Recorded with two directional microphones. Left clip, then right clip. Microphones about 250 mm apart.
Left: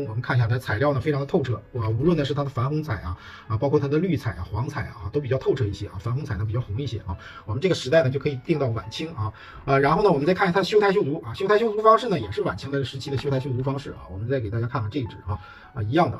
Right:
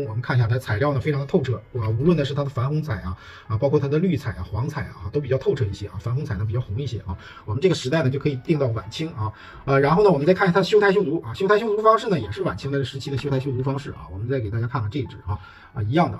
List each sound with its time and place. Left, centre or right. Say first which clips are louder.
0.2 s a man's voice: left 1 dB; centre
7.6 s speech: left 1 dB; centre
9.7 s speech: right 2 dB; centre